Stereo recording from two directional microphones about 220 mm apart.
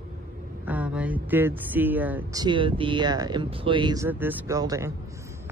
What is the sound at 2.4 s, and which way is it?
Speech, 20° right (ahead or behind).